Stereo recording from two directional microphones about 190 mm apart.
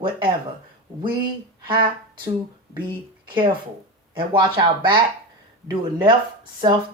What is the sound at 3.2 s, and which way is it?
Speech, 25° right (ahead or behind).